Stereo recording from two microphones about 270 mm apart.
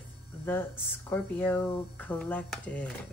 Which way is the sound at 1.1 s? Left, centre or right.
Centre.